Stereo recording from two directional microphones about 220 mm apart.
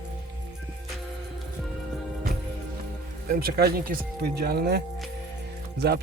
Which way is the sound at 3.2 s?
45° right (ahead or behind).